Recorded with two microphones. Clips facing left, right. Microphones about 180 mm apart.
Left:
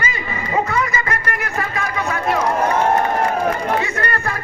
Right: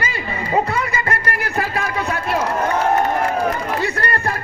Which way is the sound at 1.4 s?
35° right (ahead or behind).